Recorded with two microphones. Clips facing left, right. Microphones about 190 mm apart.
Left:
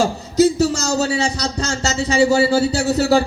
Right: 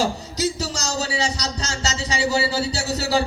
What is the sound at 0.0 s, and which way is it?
A man's voice, 50° left (ahead or behind).